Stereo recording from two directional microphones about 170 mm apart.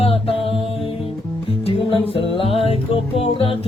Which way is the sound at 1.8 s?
30° left (ahead or behind).